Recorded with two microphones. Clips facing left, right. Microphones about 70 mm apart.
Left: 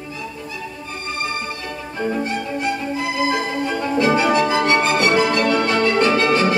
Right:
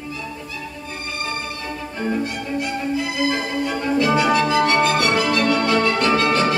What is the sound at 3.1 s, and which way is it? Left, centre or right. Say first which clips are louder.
Music: left 1 dB; left.